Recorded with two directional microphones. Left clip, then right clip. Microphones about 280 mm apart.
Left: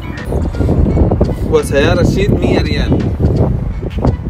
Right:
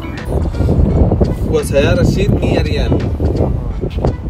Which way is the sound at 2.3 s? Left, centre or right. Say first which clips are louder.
Left 2 dB; right.